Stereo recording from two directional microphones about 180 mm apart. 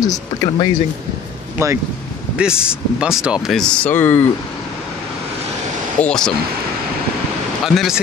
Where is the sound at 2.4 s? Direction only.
5° right (ahead or behind); by 4.3 s 10° left (ahead or behind).